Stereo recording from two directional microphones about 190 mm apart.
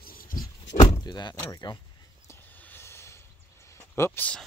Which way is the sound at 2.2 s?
10° left (ahead or behind).